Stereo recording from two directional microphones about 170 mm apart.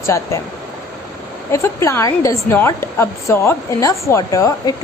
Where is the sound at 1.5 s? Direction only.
15° left (ahead or behind).